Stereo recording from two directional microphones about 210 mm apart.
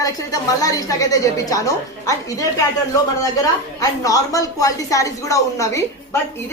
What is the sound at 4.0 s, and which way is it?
A woman's voice, 15° left (ahead or behind).